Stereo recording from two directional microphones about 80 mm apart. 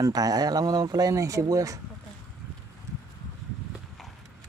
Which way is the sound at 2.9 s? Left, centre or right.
Right.